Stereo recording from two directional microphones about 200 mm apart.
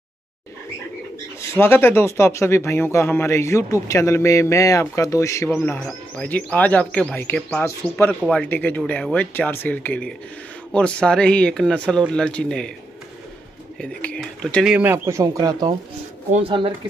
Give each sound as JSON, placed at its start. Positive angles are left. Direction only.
{"t": 1.6, "sound": "a man's voice", "side_deg": 10}
{"t": 13.7, "sound": "speech", "side_deg": 5}
{"t": 14.7, "sound": "speech", "side_deg": -10}
{"t": 16.3, "sound": "speech", "side_deg": -30}